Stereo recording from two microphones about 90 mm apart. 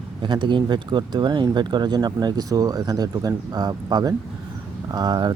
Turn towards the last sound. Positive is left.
turn(degrees=-50)  # may be behind; listen again after turning